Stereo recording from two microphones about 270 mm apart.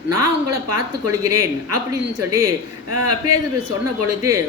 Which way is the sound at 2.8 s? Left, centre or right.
Right.